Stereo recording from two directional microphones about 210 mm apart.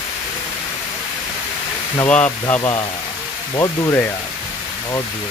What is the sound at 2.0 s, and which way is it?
Speech, 5° left (ahead or behind).